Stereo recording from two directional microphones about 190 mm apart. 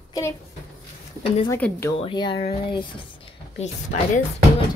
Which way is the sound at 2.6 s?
25° left (ahead or behind).